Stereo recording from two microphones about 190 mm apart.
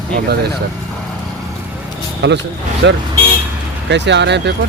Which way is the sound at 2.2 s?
70° right (ahead or behind).